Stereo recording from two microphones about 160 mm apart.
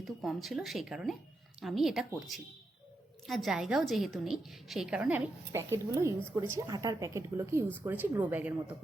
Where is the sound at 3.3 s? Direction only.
Centre (ahead or behind).